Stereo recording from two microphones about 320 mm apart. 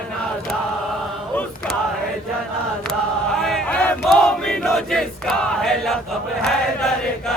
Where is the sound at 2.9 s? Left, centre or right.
Centre.